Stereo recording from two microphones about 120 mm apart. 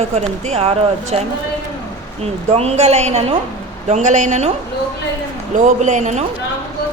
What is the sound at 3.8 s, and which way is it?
Speech, 75° right (ahead or behind).